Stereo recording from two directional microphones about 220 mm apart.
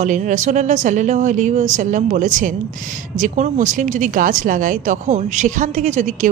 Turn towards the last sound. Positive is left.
turn(degrees=-35)  # may be behind; listen again after turning